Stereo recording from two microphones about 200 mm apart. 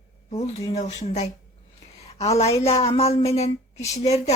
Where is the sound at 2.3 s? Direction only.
30° left (ahead or behind).